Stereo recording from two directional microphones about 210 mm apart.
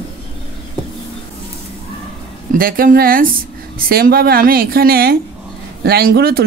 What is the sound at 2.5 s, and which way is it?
Speech, 45° right (ahead or behind).